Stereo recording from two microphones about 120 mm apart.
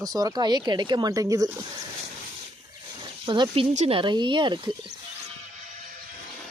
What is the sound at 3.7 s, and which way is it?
Speech, 60° right (ahead or behind).